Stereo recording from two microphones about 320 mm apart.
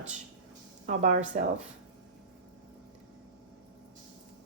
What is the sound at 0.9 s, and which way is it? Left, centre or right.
Speech, right.